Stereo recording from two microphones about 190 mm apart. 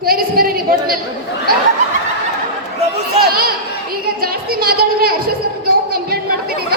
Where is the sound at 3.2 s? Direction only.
35° right (ahead or behind).